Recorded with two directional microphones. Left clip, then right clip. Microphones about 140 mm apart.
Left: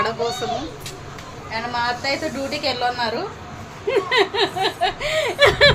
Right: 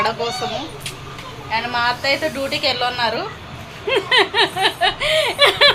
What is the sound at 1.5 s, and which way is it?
A woman's voice, 5° right (ahead or behind).